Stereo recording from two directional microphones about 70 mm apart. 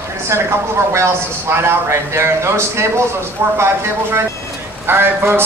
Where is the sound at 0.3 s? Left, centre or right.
Right.